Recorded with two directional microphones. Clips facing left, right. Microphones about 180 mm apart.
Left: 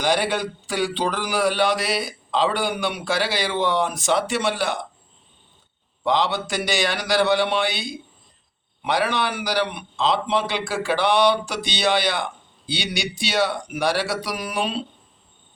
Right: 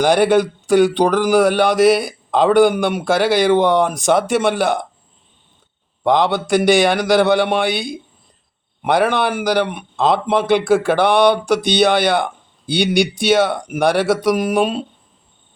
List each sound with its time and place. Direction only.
0.0 s a man's voice: 55° right (ahead or behind)
6.0 s a man's voice: 55° right (ahead or behind)